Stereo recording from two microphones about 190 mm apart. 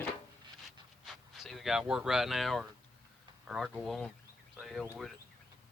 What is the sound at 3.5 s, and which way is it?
Speech, centre (ahead or behind).